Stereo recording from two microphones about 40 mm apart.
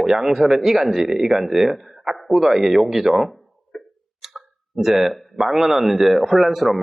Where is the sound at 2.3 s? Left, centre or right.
Centre.